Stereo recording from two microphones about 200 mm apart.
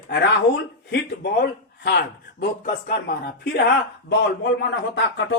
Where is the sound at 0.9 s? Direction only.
55° left (ahead or behind).